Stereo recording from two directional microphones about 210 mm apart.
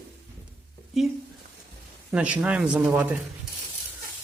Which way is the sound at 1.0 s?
Centre (ahead or behind).